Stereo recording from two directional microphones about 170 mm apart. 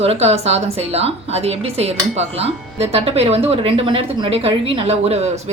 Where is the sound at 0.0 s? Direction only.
35° right (ahead or behind).